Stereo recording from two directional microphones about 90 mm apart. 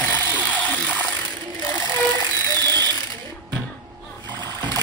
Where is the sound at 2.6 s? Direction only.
50° right (ahead or behind).